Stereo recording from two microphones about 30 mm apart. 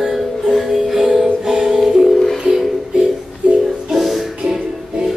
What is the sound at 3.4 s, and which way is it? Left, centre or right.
Music, right.